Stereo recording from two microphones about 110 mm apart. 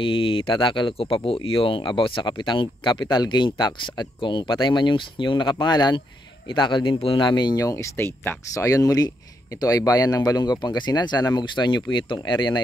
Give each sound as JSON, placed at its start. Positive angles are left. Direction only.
{"t": 0.0, "sound": "speech", "side_deg": 55}